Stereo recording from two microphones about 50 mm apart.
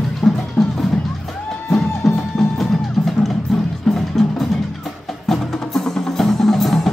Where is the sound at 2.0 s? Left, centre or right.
Centre.